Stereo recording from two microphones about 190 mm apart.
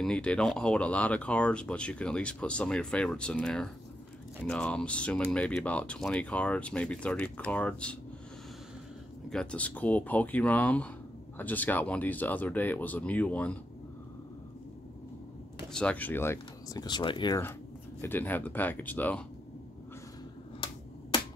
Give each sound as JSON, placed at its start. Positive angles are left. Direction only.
{"t": 0.0, "sound": "speech", "side_deg": 5}
{"t": 9.3, "sound": "speech", "side_deg": 5}
{"t": 15.7, "sound": "speech", "side_deg": 5}
{"t": 18.0, "sound": "speech", "side_deg": 10}
{"t": 20.6, "sound": "finger snapping", "side_deg": 25}